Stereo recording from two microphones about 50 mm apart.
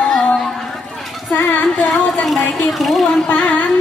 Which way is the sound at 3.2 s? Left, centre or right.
Left.